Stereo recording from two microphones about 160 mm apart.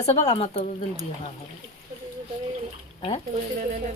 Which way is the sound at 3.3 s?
55° right (ahead or behind).